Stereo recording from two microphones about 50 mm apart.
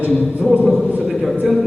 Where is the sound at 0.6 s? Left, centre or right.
Centre.